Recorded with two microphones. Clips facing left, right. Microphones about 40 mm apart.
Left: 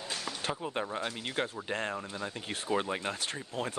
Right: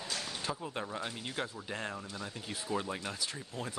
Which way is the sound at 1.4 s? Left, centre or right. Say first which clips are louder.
Left 5 dB; left.